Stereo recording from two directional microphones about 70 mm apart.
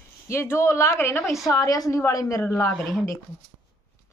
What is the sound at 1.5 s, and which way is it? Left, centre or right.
A woman's voice, left.